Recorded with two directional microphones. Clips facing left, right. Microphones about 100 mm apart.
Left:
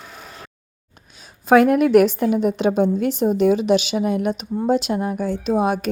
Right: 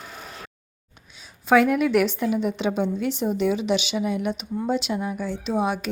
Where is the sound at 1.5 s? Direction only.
50° left (ahead or behind).